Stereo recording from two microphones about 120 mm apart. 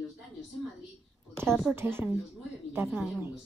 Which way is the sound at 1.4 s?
5° left (ahead or behind).